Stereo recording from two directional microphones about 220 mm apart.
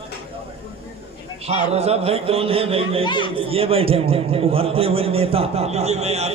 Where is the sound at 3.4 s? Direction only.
25° right (ahead or behind).